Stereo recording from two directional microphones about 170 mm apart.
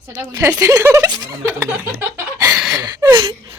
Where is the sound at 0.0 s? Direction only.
15° right (ahead or behind).